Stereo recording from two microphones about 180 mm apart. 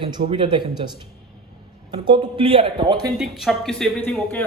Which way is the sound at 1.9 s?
25° right (ahead or behind).